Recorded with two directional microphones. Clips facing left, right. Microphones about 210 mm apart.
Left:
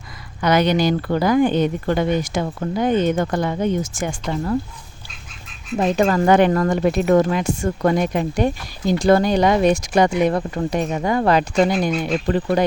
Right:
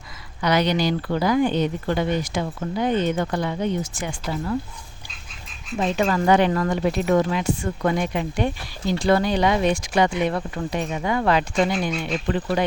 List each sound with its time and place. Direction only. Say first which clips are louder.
0.4 s speech: left 4 dB; 50° left (ahead or behind)
5.7 s speech: left 4 dB; 45° left (ahead or behind)